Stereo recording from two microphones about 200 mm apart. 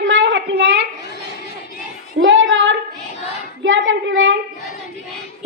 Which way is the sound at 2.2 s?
70° right (ahead or behind).